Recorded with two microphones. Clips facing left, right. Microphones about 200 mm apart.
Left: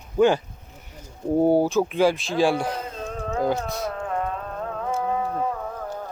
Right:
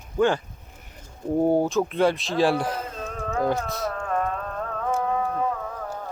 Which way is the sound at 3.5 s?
20° left (ahead or behind).